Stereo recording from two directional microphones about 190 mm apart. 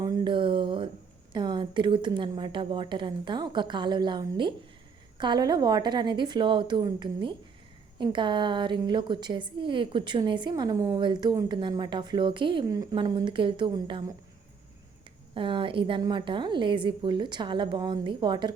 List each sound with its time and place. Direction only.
0.0 s a sound: 20° right (ahead or behind)
1.3 s a woman's voice: 25° right (ahead or behind)
15.4 s a woman's voice: 25° right (ahead or behind)